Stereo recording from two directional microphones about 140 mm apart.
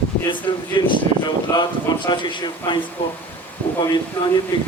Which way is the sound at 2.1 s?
30° left (ahead or behind).